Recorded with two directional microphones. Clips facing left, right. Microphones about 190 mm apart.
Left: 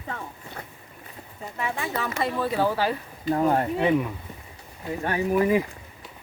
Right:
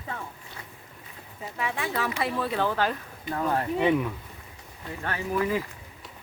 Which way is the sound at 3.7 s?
Centre (ahead or behind).